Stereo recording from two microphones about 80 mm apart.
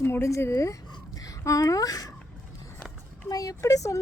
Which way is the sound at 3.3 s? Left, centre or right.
Left.